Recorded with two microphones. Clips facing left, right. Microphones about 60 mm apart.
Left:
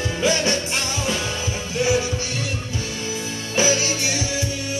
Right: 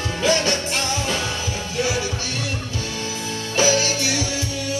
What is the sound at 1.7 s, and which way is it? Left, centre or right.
Music, left.